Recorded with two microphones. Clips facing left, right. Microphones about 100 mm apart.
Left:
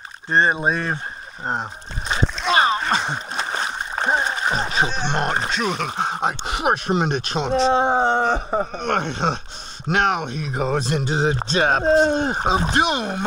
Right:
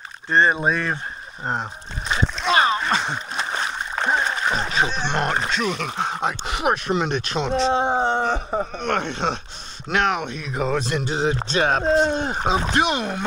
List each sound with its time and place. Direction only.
0.3 s speech: 25° left (ahead or behind)
2.2 s speech: centre (ahead or behind)
2.5 s speech: 25° left (ahead or behind)
3.1 s splash: 35° left (ahead or behind)
4.0 s speech: 20° left (ahead or behind)
7.8 s a sound: 50° left (ahead or behind)
8.4 s speech: 40° left (ahead or behind)